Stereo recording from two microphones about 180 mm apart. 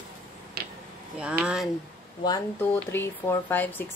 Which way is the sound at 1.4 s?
5° right (ahead or behind).